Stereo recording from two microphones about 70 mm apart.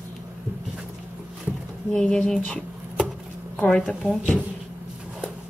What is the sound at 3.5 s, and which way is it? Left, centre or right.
Speech, centre.